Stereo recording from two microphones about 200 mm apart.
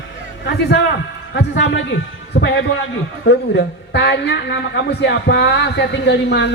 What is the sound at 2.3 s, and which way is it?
Speech, 40° left (ahead or behind).